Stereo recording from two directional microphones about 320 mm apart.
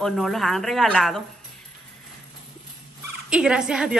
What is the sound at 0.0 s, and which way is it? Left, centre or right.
Speech, centre.